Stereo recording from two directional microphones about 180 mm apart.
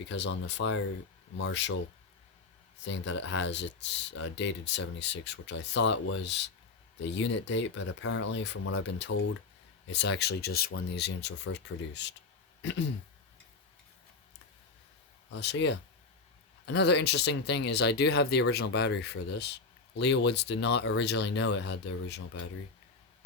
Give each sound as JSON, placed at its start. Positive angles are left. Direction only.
{"t": 0.1, "sound": "speech", "side_deg": 75}
{"t": 2.8, "sound": "speech", "side_deg": 80}
{"t": 15.4, "sound": "speech", "side_deg": 75}